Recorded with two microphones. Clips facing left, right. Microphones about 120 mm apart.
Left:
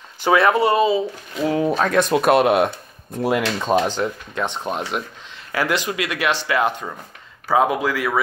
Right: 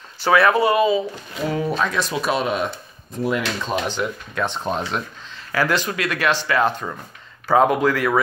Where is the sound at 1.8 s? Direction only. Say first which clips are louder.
Left 5 dB; 55° left (ahead or behind).